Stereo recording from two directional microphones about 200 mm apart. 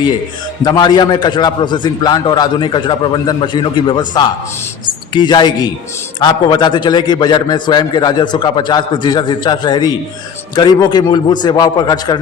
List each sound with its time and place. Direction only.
0.6 s a man's voice: 20° left (ahead or behind)